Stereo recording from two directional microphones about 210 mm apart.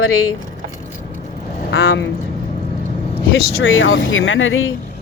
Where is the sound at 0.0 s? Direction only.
85° left.